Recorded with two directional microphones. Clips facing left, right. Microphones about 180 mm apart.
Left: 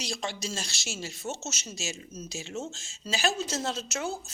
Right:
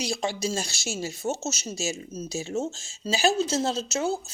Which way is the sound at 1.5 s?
35° right (ahead or behind).